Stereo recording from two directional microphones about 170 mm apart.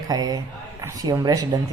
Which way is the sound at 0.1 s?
20° right (ahead or behind).